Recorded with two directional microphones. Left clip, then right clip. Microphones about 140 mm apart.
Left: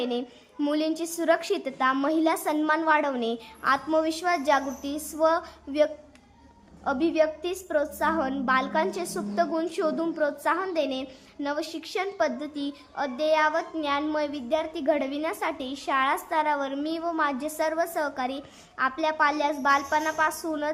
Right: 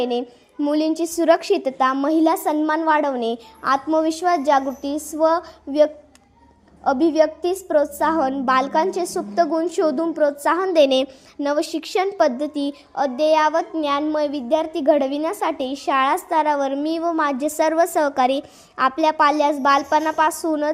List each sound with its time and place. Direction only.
0.0 s a woman's voice: 35° right (ahead or behind)
10.8 s a woman's voice: 70° right (ahead or behind)
11.4 s a woman's voice: 50° right (ahead or behind)